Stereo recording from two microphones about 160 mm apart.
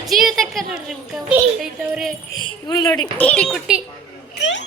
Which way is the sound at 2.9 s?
5° left (ahead or behind).